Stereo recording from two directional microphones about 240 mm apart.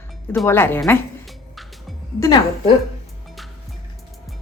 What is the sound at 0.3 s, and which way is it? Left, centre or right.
Speech, centre.